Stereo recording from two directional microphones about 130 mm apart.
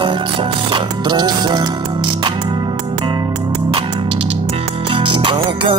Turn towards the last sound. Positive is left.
turn(degrees=-40)  # may be behind; listen again after turning